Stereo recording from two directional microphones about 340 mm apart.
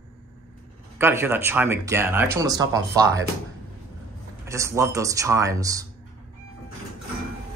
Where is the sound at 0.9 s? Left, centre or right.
Centre.